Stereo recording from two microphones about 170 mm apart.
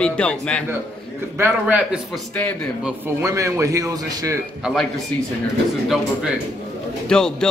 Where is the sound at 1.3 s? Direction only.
10° right (ahead or behind).